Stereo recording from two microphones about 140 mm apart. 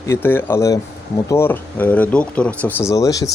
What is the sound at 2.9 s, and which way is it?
Speech, 25° left (ahead or behind).